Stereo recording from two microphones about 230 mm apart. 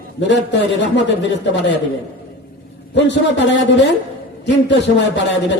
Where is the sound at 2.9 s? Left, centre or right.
Left.